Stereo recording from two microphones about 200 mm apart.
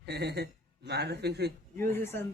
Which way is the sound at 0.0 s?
55° right (ahead or behind).